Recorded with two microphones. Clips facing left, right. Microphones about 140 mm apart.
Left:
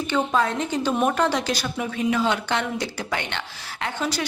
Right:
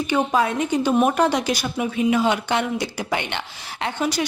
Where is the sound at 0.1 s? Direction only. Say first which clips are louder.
Right 2 dB; 10° right (ahead or behind).